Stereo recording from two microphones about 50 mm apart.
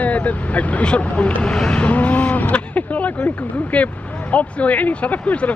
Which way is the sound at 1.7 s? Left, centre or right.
Left.